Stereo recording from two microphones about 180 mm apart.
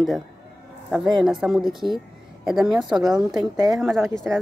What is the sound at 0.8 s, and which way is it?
Speech, centre (ahead or behind).